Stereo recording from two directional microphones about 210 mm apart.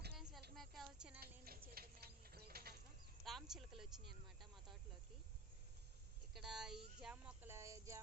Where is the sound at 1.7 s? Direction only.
45° right (ahead or behind).